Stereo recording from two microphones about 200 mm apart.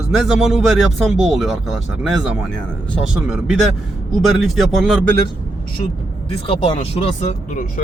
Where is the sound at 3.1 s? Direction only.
Centre (ahead or behind).